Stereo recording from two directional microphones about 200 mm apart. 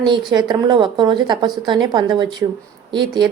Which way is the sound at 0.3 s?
20° right (ahead or behind).